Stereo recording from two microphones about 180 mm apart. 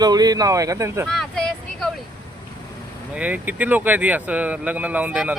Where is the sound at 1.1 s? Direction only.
Centre (ahead or behind).